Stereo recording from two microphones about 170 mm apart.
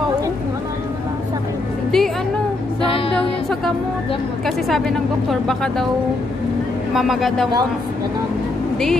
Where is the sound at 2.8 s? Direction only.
35° left (ahead or behind).